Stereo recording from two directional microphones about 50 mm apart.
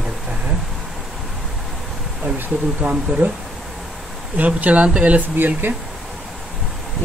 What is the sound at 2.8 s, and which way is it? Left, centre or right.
Speech, right.